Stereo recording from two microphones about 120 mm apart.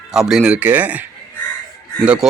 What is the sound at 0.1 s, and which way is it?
Speech, 5° right (ahead or behind).